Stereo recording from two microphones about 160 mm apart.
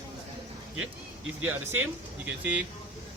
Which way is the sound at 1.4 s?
10° right (ahead or behind).